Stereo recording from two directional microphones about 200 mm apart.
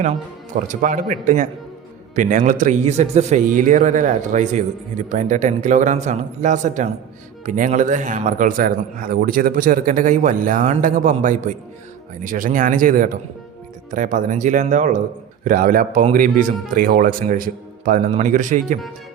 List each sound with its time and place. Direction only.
0.7 s a man's voice: 40° right (ahead or behind)